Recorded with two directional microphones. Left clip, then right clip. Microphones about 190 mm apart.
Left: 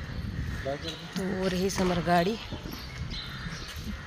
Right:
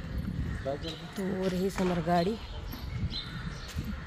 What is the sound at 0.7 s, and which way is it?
Speech, 70° right (ahead or behind).